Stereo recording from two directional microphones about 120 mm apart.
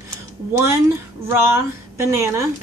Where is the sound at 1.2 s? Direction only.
25° right (ahead or behind).